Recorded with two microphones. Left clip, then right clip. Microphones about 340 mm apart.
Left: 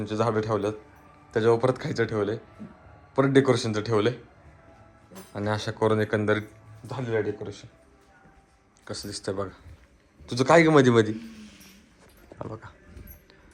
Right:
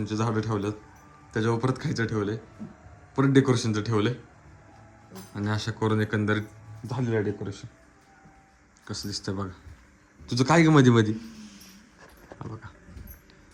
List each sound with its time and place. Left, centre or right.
0.0 s a man's voice: centre
5.3 s a man's voice: centre
6.8 s a man's voice: centre
8.8 s a man's voice: centre
12.4 s speech: centre